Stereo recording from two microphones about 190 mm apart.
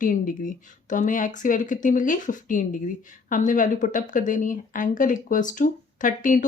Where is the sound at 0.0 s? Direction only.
45° left (ahead or behind).